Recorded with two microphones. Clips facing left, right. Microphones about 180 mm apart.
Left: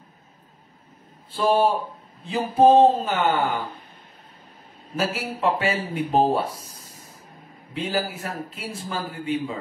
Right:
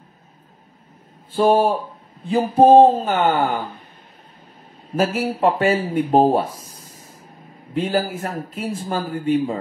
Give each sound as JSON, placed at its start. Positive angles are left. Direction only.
{"t": 1.3, "sound": "a man's voice", "side_deg": -50}
{"t": 4.9, "sound": "a man's voice", "side_deg": -50}